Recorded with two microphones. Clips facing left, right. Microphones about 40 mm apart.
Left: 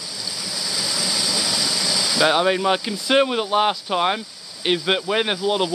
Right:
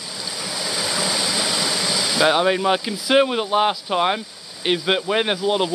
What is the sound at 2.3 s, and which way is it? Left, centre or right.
Speech, centre.